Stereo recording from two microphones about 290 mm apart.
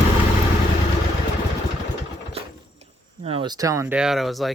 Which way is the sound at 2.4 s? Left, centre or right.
Centre.